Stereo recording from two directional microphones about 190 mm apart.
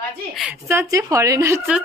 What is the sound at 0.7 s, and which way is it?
Speech, 15° right (ahead or behind).